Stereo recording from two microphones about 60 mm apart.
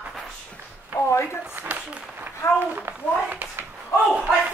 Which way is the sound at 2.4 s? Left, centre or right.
Left.